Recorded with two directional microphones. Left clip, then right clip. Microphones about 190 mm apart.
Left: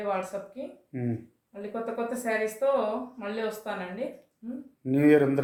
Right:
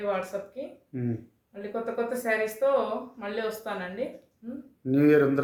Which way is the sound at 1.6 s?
20° right (ahead or behind).